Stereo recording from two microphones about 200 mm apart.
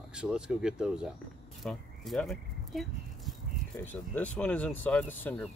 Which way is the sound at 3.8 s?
10° left (ahead or behind).